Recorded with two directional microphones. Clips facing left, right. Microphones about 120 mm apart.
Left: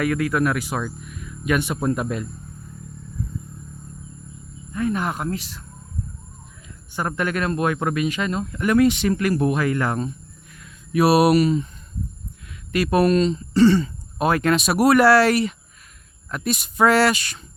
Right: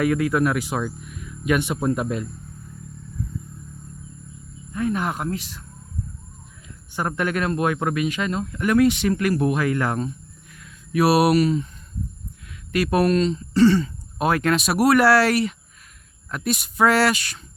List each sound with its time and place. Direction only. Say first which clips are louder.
0.0 s speech: right 1 dB; 20° right (ahead or behind)
4.7 s speech: even; 10° right (ahead or behind)
7.2 s speech: even; 15° right (ahead or behind)
8.3 s speech: left 1 dB; centre (ahead or behind)